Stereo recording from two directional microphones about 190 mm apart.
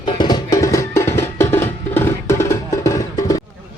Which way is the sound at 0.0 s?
25° left (ahead or behind).